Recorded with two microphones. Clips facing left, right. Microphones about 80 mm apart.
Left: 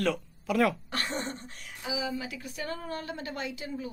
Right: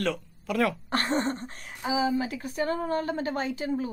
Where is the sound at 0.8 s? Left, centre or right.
Right.